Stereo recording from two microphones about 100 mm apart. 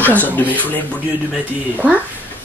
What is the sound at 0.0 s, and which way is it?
Speech, 15° left (ahead or behind).